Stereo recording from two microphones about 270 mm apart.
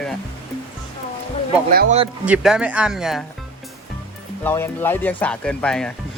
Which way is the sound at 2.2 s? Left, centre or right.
Centre.